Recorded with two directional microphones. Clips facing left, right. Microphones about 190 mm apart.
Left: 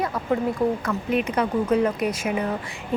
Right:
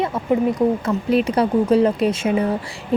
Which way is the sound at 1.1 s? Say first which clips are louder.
Right 6 dB; 35° right (ahead or behind).